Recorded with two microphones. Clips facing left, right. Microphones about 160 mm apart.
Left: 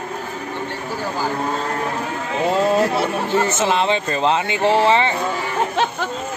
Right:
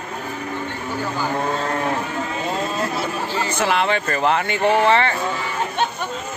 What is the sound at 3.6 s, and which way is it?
Speech, 20° left (ahead or behind).